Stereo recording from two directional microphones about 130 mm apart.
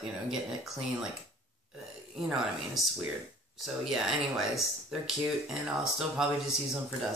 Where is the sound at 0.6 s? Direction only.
Centre (ahead or behind).